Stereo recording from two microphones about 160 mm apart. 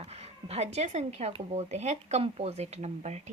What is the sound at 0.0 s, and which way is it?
Speech, 40° right (ahead or behind).